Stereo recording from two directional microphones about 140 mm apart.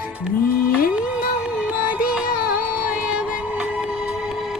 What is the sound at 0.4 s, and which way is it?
Music, 90° left.